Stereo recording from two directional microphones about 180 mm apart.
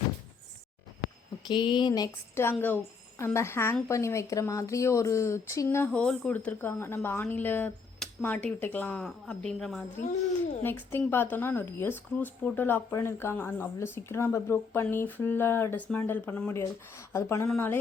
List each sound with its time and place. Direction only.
1.5 s a woman's voice: 25° left (ahead or behind)